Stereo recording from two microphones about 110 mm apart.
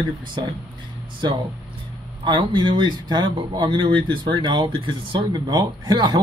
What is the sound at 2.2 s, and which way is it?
Speech, 45° right (ahead or behind).